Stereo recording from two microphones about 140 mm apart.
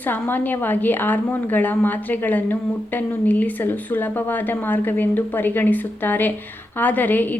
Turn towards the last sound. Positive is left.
turn(degrees=15)  # may be behind; listen again after turning